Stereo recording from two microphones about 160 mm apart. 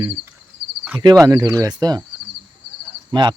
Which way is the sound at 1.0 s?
25° right (ahead or behind).